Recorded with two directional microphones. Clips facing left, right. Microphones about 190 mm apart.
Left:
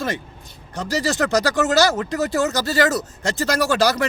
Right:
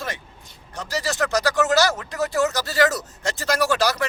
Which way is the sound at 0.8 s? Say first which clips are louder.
Left 4 dB; 35° left (ahead or behind).